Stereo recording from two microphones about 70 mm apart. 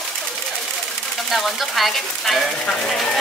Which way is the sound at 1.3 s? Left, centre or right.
Centre.